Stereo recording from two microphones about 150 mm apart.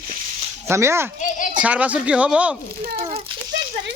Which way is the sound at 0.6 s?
20° right (ahead or behind).